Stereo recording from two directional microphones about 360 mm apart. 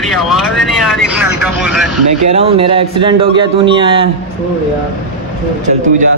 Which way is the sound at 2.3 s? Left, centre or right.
Centre.